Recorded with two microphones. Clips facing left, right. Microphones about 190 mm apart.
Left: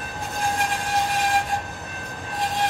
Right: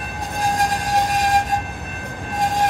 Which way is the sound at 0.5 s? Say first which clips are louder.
Right 6 dB; 40° right (ahead or behind).